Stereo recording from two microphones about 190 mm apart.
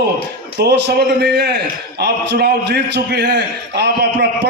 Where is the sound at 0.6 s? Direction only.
65° right (ahead or behind).